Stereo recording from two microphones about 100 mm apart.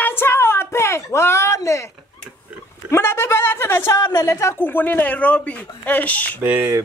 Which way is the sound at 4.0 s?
40° left (ahead or behind).